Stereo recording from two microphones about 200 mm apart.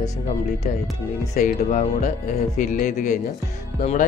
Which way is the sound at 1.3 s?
35° left (ahead or behind).